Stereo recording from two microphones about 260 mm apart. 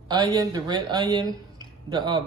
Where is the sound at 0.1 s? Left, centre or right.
Centre.